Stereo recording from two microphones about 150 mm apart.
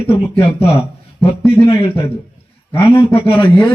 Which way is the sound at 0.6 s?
40° left (ahead or behind).